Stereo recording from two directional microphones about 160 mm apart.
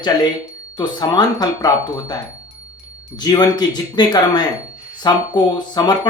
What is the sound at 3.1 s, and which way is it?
Speech, 25° left (ahead or behind).